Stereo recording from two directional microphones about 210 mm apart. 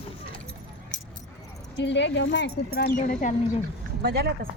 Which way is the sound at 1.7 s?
55° left (ahead or behind).